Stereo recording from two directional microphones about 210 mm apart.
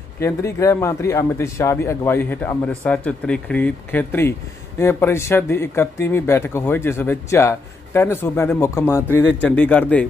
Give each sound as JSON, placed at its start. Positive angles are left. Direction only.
{"t": 0.2, "sound": "speech", "side_deg": 15}